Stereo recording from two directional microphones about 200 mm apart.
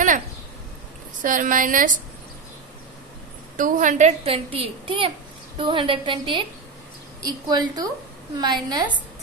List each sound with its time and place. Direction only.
1.2 s a woman's voice: 40° right (ahead or behind)
3.5 s a woman's voice: 40° right (ahead or behind); by 8.8 s 20° right (ahead or behind)